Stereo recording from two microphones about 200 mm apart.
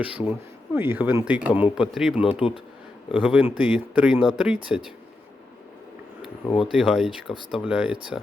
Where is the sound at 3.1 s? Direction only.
5° right (ahead or behind).